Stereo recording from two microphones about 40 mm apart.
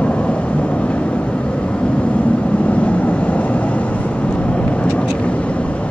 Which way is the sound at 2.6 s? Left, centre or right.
Left.